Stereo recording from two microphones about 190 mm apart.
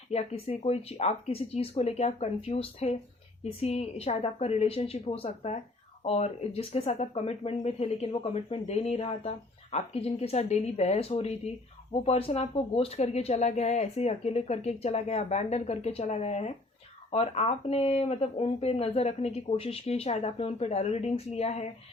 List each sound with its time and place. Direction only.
0.1 s speech: 35° left (ahead or behind)